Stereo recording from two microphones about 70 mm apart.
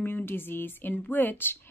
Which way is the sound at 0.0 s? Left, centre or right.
Left.